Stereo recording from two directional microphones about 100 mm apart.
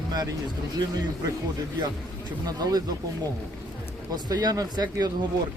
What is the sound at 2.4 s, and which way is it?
Speech, 40° right (ahead or behind).